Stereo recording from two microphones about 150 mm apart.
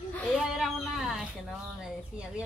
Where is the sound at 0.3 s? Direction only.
Centre (ahead or behind).